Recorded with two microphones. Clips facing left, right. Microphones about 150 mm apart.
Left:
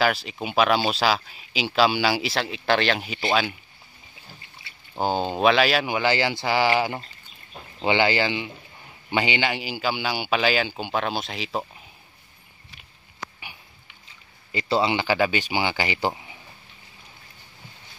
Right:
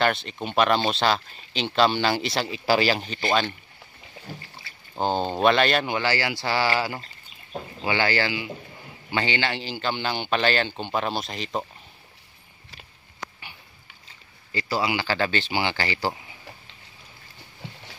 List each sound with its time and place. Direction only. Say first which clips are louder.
0.0 s speech: left 1 dB; 5° left (ahead or behind)
3.0 s a man's voice: even; 5° left (ahead or behind)
4.9 s a man's voice: even; 5° left (ahead or behind)
14.5 s a man's voice: left 3 dB; 20° left (ahead or behind)